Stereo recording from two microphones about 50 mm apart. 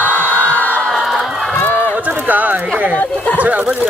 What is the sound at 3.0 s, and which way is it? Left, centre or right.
Speech, left.